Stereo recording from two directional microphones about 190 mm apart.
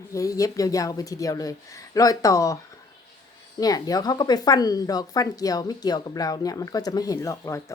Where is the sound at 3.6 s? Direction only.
20° left (ahead or behind).